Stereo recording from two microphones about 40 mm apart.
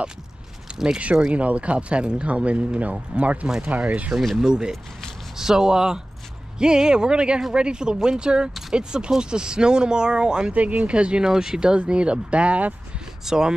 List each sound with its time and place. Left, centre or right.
0.8 s speech: right
4.4 s speech: centre
10.5 s speech: right
10.9 s speech: right
13.2 s speech: centre